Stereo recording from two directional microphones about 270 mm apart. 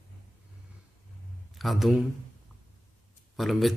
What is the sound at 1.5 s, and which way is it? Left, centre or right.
Speech, centre.